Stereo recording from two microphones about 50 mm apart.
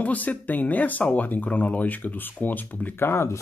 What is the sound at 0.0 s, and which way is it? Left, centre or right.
Speech, left.